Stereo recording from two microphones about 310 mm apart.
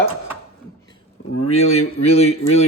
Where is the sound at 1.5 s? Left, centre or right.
Centre.